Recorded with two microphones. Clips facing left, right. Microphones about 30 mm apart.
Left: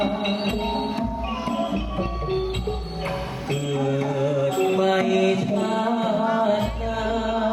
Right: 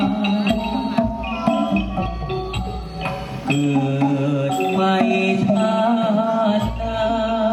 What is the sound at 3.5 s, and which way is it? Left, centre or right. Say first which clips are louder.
Music: right 6 dB; right.